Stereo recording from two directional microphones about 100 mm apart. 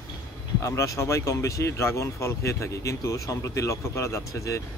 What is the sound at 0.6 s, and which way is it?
Speech, 30° left (ahead or behind).